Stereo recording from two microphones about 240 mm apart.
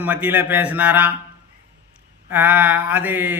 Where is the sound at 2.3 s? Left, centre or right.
Centre.